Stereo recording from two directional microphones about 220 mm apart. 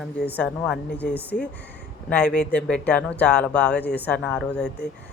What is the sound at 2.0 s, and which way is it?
Speech, 5° left (ahead or behind).